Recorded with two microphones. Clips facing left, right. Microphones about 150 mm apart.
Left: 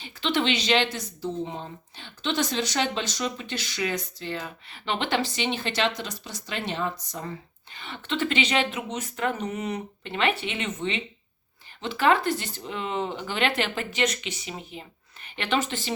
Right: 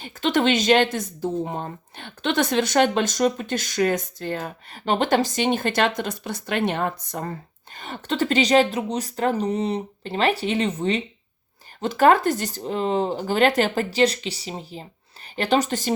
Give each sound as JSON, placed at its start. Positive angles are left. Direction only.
{"t": 0.0, "sound": "a woman's voice", "side_deg": -45}